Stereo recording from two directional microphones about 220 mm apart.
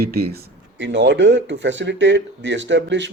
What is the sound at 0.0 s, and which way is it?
Speech, 45° right (ahead or behind).